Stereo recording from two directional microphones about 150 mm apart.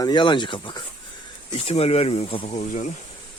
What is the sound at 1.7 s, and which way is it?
Speech, 45° left (ahead or behind).